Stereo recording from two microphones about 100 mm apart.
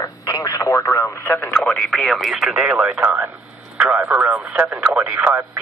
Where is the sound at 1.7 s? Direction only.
Centre (ahead or behind).